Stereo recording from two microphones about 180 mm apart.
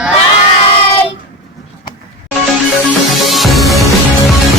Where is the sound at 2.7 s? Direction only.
Centre (ahead or behind).